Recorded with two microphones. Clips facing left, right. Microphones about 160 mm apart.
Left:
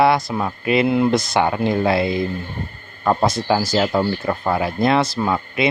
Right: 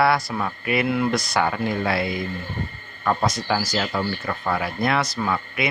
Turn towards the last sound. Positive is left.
turn(degrees=25)  # may be behind; listen again after turning